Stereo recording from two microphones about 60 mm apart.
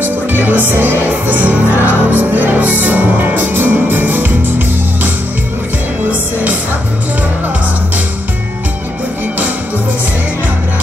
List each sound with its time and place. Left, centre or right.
0.0 s music: right